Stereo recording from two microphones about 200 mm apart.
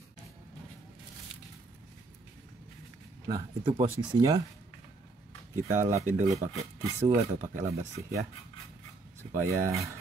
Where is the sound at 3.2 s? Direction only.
20° right (ahead or behind).